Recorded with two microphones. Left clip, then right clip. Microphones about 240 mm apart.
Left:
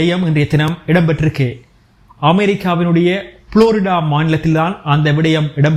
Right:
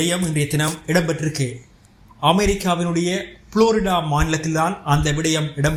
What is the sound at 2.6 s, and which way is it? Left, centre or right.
A man's voice, left.